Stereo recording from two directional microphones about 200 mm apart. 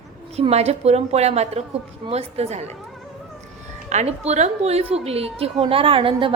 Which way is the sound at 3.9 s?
35° right (ahead or behind).